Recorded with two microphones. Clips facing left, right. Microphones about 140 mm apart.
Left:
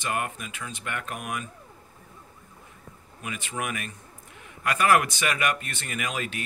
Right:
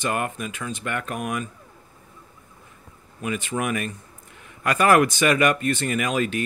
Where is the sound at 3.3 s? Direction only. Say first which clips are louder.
Right 7 dB; 40° right (ahead or behind).